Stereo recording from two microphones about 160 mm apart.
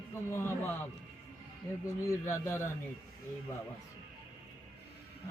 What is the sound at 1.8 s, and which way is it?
Music, 15° left (ahead or behind).